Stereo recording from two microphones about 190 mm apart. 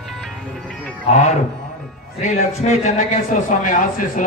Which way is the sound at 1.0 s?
35° left (ahead or behind).